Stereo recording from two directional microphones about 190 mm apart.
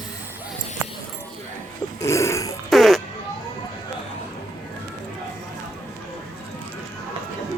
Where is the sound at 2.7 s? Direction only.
Centre (ahead or behind).